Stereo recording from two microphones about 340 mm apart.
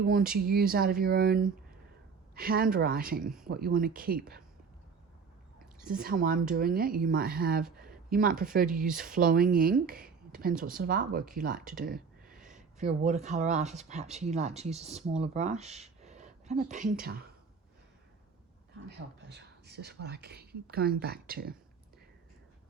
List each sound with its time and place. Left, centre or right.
0.0 s speech: right
3.2 s speech: centre
3.5 s speech: right
5.8 s speech: right
12.2 s a sound: centre
12.8 s speech: centre
18.9 s speech: right